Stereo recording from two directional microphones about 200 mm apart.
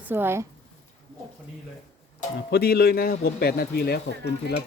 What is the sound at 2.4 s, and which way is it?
Speech, 50° left (ahead or behind).